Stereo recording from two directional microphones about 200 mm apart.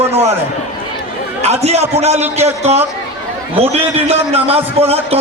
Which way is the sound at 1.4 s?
30° right (ahead or behind).